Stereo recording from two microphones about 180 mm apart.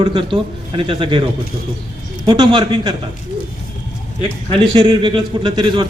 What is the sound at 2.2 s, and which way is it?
Speech, 25° right (ahead or behind).